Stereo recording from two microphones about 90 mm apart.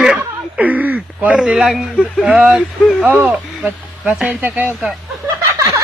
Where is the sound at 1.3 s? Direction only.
5° right (ahead or behind).